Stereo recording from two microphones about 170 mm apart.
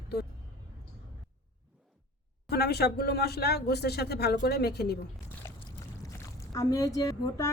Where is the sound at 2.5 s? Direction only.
70° left (ahead or behind).